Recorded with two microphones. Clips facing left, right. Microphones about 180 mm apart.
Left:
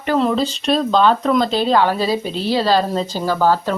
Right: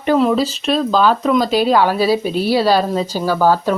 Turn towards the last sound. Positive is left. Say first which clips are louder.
# right 2 dB
turn(degrees=-10)  # may be behind; listen again after turning